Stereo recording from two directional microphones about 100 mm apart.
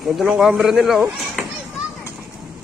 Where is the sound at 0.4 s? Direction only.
5° right (ahead or behind).